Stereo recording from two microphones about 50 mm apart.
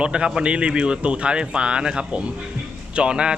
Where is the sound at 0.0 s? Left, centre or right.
Right.